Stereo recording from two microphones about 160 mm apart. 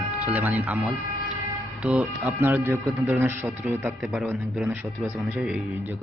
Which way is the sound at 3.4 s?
5° right (ahead or behind).